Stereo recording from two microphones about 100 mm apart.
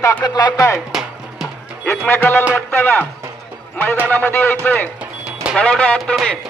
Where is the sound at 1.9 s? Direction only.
20° left (ahead or behind).